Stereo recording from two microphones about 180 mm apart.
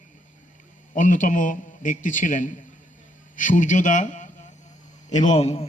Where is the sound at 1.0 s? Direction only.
45° left (ahead or behind).